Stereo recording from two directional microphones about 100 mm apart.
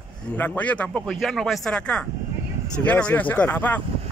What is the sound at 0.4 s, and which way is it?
Speech, 15° left (ahead or behind).